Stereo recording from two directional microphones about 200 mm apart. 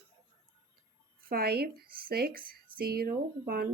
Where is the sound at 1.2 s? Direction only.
50° right (ahead or behind).